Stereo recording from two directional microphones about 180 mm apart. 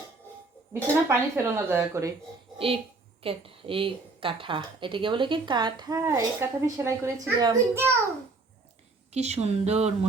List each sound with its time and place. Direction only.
0.7 s speech: 15° right (ahead or behind)
2.6 s a child's voice: 30° right (ahead or behind)
9.1 s speech: 40° right (ahead or behind)